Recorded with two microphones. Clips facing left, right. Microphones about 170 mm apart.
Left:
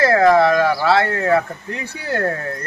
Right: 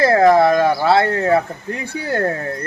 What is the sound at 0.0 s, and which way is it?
Speech, 25° right (ahead or behind).